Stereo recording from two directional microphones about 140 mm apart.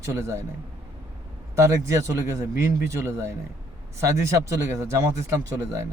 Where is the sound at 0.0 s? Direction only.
20° right (ahead or behind).